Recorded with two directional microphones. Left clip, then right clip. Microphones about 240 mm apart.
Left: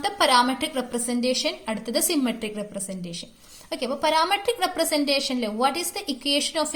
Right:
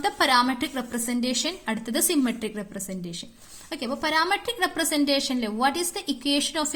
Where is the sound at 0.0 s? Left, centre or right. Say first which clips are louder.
Left 1 dB; right.